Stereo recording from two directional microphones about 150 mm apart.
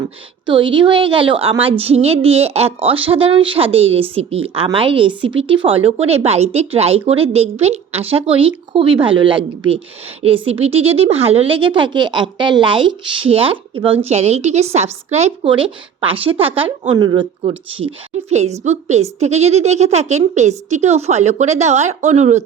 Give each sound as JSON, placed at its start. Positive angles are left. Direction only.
{"t": 0.4, "sound": "a woman's voice", "side_deg": -35}
{"t": 18.3, "sound": "a woman's voice", "side_deg": -45}